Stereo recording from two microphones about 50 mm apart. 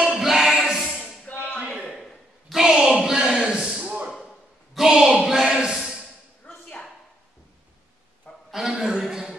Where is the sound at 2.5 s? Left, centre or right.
Centre.